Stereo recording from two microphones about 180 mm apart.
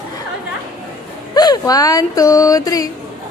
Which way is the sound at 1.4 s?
20° left (ahead or behind).